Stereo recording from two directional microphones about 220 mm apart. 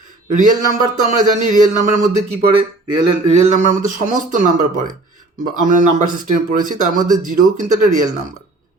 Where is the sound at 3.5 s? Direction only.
35° right (ahead or behind).